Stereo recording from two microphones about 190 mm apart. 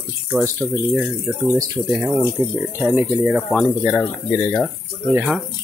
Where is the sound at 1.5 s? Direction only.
15° right (ahead or behind).